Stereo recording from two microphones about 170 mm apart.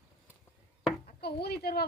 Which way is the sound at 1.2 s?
70° left (ahead or behind).